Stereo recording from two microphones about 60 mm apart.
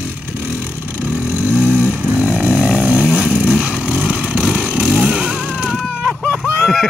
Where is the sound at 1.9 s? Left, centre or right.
Right.